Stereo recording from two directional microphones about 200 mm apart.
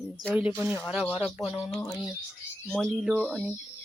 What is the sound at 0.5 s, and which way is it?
A woman's voice, 5° left (ahead or behind).